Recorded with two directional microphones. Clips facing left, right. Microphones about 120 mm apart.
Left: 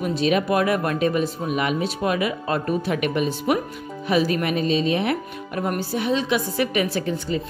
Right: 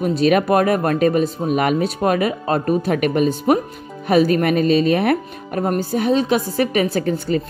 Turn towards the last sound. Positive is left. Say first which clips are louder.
# right 5 dB
turn(degrees=-50)  # may be behind; listen again after turning